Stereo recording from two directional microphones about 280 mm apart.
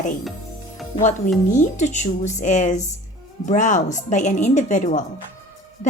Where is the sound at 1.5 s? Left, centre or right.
Left.